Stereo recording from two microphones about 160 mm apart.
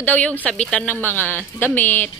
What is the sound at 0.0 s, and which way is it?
Speech, 10° left (ahead or behind).